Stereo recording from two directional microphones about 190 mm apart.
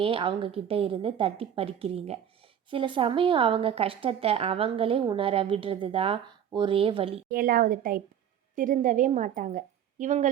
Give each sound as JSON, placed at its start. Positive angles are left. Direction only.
{"t": 0.0, "sound": "speech", "side_deg": -25}
{"t": 7.3, "sound": "a woman's voice", "side_deg": -50}